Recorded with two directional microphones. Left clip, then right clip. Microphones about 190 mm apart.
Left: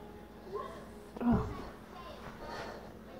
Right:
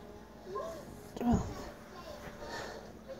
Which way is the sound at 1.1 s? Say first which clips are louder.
Even; 20° right (ahead or behind).